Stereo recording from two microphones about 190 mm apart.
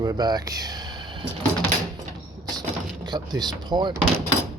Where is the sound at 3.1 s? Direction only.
20° right (ahead or behind).